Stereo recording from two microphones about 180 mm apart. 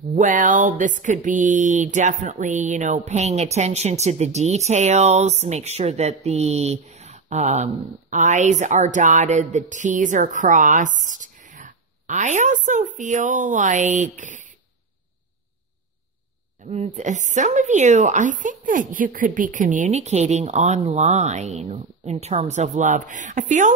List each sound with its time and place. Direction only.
0.1 s a woman's voice: 45° right (ahead or behind)
16.6 s speech: 40° right (ahead or behind)